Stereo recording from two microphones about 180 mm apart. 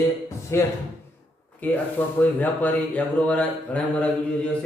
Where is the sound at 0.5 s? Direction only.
15° left (ahead or behind).